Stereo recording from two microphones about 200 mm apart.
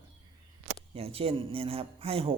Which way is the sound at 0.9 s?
30° right (ahead or behind).